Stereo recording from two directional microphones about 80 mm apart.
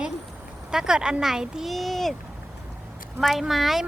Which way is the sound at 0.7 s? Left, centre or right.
Centre.